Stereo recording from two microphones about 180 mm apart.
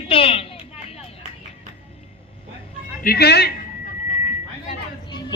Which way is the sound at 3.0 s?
60° left (ahead or behind).